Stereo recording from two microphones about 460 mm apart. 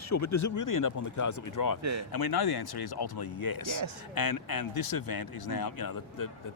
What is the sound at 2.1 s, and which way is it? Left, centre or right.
Speech, left.